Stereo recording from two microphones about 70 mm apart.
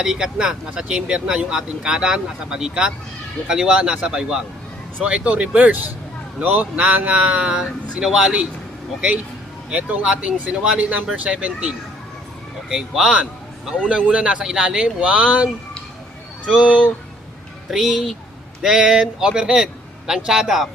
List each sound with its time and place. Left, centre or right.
0.0 s speech: centre
9.6 s speech: centre
12.6 s speech: centre
16.6 s speech: centre
17.7 s speech: centre